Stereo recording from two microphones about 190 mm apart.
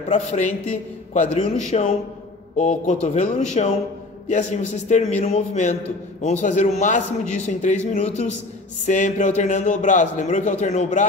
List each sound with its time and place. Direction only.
0.1 s a man's voice: 40° left (ahead or behind)